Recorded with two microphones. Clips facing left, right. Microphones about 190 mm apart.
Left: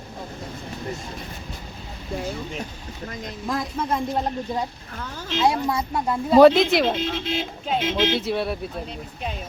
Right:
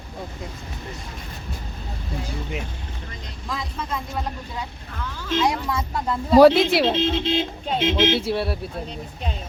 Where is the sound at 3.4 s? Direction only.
50° left (ahead or behind).